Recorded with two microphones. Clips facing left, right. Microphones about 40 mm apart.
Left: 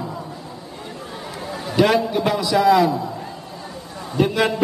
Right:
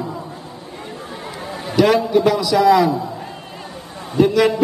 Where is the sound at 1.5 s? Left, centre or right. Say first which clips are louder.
Even; centre.